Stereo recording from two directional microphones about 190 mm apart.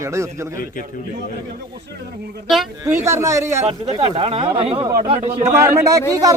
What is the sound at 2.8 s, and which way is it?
A man's voice, 15° right (ahead or behind).